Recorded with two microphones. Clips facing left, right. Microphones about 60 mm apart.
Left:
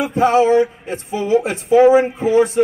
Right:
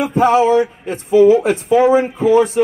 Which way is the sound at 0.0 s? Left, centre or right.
Right.